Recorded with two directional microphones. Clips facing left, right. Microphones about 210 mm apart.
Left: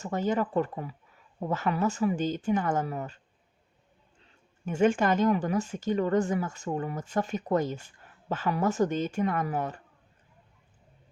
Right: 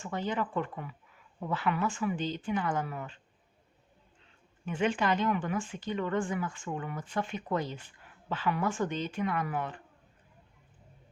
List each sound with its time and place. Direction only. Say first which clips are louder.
0.0 s speech: left 5 dB; 45° left (ahead or behind)
4.6 s speech: left 5 dB; 45° left (ahead or behind)